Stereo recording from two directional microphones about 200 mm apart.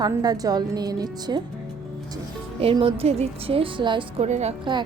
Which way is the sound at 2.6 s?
30° right (ahead or behind).